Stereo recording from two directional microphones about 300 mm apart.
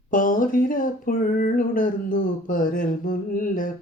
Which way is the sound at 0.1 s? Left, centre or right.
Left.